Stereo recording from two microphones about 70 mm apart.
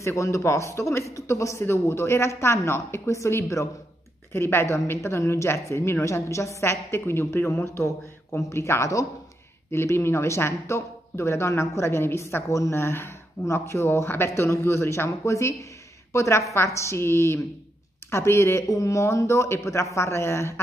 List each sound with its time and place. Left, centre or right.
0.0 s speech: left